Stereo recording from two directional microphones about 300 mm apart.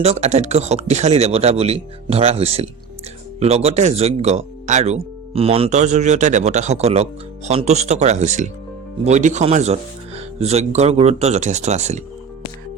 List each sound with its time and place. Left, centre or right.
0.0 s speech: right